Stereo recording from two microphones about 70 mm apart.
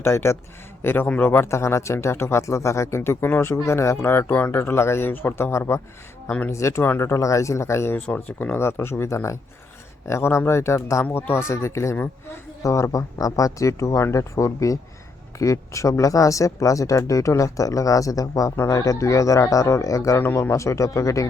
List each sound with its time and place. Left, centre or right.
0.0 s speech: left
11.0 s speech: left
18.5 s speech: left
20.1 s speech: left